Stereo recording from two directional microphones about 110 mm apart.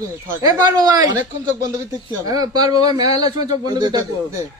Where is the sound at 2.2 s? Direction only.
35° right (ahead or behind).